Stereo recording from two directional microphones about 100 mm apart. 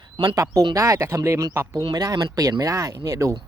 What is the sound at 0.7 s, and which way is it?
Speech, 30° right (ahead or behind).